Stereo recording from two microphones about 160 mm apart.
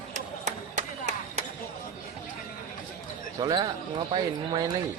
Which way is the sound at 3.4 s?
25° right (ahead or behind).